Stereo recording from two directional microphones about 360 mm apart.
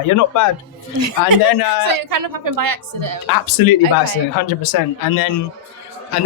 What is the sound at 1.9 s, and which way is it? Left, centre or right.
A woman's voice, right.